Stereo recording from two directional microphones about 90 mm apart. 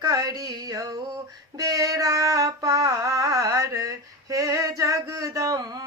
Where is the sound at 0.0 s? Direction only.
45° right (ahead or behind).